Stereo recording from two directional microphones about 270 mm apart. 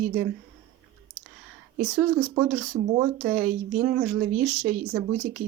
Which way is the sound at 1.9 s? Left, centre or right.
Centre.